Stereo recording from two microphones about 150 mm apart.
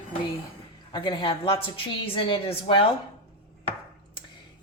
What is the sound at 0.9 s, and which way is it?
A woman's voice, 30° left (ahead or behind).